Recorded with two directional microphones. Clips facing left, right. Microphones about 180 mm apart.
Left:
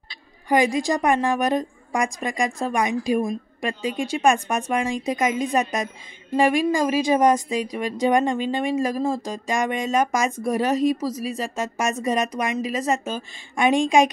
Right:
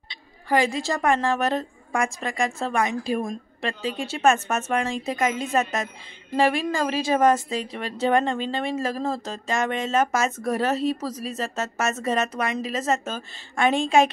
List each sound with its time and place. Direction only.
0.5 s a woman's voice: 15° left (ahead or behind)